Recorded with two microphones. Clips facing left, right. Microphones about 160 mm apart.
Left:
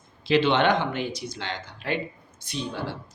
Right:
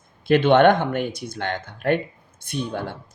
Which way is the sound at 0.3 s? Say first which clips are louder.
Right 6 dB; 50° right (ahead or behind).